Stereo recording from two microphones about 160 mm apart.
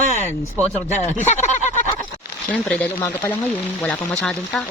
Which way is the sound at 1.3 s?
45° left (ahead or behind).